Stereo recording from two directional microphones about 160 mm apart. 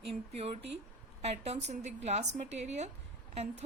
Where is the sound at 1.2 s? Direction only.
40° right (ahead or behind).